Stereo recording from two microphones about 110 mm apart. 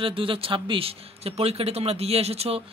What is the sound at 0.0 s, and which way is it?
Speech, 55° right (ahead or behind).